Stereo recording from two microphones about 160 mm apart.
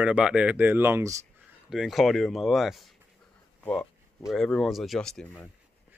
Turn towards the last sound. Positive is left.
turn(degrees=5)  # may be behind; listen again after turning